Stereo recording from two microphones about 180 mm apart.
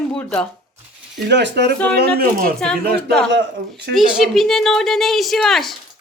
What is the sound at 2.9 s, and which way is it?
Speech, 65° right (ahead or behind).